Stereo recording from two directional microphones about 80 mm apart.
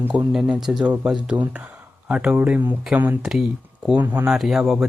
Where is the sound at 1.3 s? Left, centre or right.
Right.